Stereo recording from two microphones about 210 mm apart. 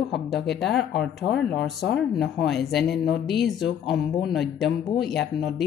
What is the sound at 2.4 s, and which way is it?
Speech, centre (ahead or behind).